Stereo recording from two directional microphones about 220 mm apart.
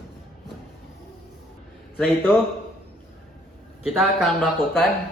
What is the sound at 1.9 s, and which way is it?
Speech, 5° left (ahead or behind).